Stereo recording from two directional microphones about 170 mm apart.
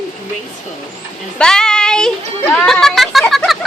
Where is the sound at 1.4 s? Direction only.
5° left (ahead or behind).